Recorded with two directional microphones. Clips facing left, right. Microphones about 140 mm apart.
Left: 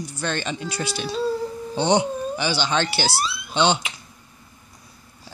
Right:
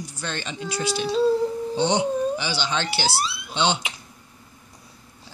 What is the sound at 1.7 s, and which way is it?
Speech, 55° left (ahead or behind).